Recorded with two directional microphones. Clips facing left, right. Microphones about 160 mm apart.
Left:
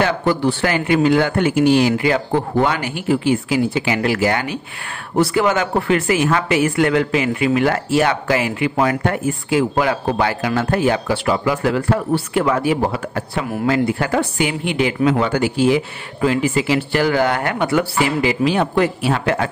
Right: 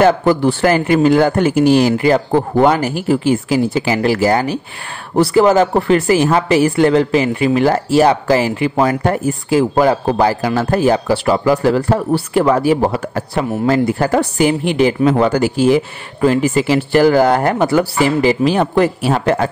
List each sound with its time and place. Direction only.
0.0 s a woman's voice: 45° right (ahead or behind)